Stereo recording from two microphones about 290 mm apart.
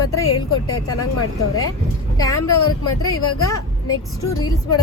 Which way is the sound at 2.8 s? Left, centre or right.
Left.